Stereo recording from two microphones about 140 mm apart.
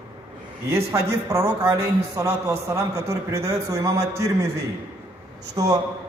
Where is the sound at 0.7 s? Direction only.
20° right (ahead or behind).